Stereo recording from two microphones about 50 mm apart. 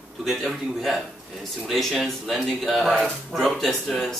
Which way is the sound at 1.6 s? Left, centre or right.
Centre.